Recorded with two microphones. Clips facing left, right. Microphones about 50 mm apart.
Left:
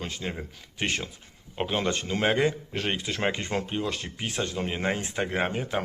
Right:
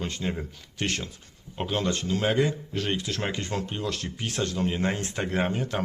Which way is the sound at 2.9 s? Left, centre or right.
Centre.